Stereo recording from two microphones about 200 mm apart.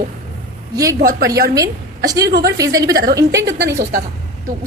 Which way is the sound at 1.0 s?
45° right (ahead or behind).